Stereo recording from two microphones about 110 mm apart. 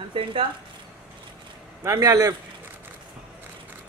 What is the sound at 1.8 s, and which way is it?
Speech, 30° right (ahead or behind).